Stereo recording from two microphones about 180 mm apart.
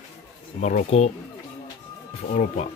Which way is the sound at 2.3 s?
40° left (ahead or behind).